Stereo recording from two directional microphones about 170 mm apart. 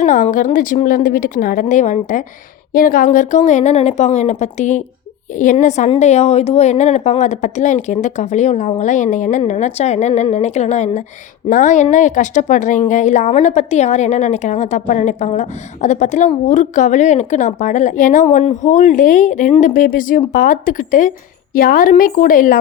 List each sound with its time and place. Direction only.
0.0 s a woman's voice: 50° left (ahead or behind)